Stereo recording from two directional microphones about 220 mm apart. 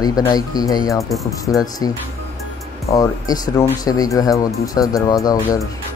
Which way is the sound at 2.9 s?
15° left (ahead or behind).